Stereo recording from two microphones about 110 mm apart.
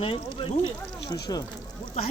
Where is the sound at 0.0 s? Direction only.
55° left (ahead or behind).